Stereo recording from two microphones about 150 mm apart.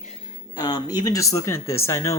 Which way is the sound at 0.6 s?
25° left (ahead or behind).